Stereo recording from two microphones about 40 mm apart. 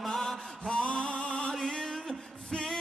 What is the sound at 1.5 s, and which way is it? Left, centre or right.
Music, centre.